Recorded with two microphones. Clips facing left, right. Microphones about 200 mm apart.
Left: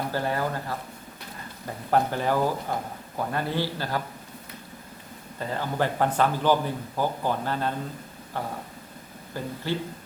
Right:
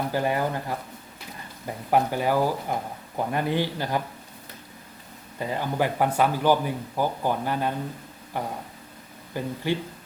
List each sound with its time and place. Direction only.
0.1 s a man's voice: 15° right (ahead or behind)
5.4 s a man's voice: 15° right (ahead or behind)